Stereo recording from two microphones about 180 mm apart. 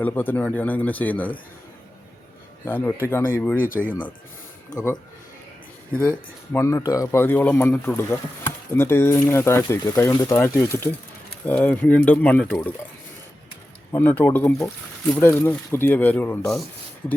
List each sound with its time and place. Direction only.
0.0 s speech: 10° left (ahead or behind)
2.6 s speech: 10° left (ahead or behind)
3.6 s speech: 50° left (ahead or behind)
6.0 s speech: 10° left (ahead or behind)
13.9 s speech: 10° left (ahead or behind)